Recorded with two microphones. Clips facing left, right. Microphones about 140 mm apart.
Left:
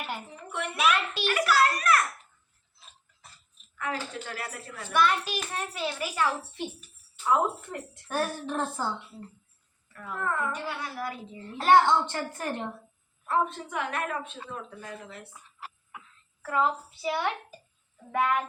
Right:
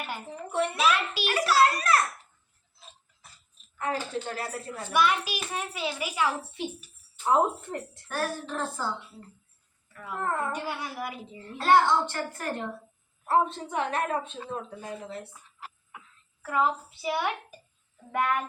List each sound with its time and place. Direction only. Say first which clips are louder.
0.5 s a woman's voice: right 2 dB; 35° right (ahead or behind)
1.3 s a sound: right 2 dB; 30° right (ahead or behind)
3.8 s a woman's voice: right 3 dB; 30° right (ahead or behind)
4.9 s a child's voice: even; 5° right (ahead or behind)
7.3 s a woman's voice: right 2 dB; 35° right (ahead or behind)
8.0 s a woman's voice: left 3 dB; 20° left (ahead or behind)
10.2 s a woman's voice: right 1 dB; 35° right (ahead or behind)
10.5 s a child's voice: right 1 dB; 15° right (ahead or behind)
11.5 s a woman's voice: left 1 dB; 20° left (ahead or behind)
13.2 s a woman's voice: right 3 dB; 30° right (ahead or behind)
16.4 s a child's voice: even; 10° right (ahead or behind)
18.1 s child singing: left 1 dB; centre (ahead or behind)